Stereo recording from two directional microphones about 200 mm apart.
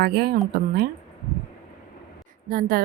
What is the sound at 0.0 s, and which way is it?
Speech, 50° right (ahead or behind).